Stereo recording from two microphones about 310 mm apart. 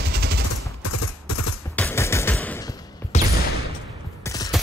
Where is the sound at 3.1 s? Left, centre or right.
Left.